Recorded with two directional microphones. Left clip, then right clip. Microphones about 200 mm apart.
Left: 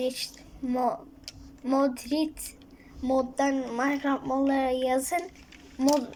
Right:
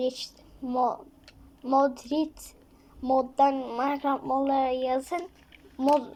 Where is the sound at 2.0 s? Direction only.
20° right (ahead or behind).